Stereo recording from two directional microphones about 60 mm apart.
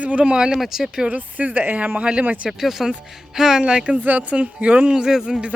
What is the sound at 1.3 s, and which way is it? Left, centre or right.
Speech, right.